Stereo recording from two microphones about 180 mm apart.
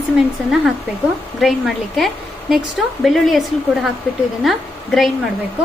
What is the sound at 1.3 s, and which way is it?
A woman's voice, centre (ahead or behind).